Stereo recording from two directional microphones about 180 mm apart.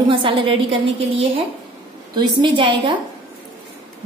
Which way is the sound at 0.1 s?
30° right (ahead or behind).